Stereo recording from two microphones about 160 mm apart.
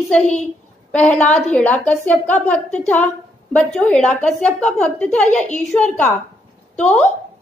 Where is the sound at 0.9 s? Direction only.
5° left (ahead or behind).